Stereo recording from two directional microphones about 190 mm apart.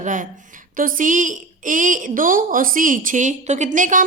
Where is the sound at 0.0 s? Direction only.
40° right (ahead or behind).